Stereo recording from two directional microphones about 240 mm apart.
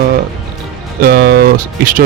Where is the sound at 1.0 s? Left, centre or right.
Right.